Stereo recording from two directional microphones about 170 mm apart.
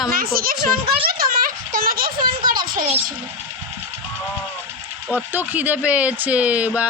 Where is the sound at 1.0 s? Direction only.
60° right (ahead or behind).